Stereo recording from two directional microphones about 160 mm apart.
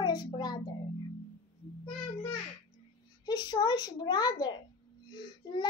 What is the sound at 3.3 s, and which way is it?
Child singing, 25° left (ahead or behind).